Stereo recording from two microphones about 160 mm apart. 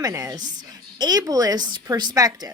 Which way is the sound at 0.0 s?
20° right (ahead or behind).